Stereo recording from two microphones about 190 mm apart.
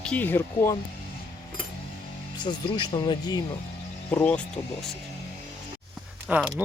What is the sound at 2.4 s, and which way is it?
Speech, 20° left (ahead or behind).